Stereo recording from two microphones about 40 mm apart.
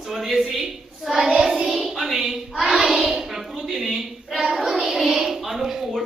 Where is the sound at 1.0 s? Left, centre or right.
Centre.